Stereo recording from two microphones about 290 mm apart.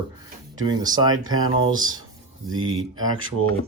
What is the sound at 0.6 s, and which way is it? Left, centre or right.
Speech, centre.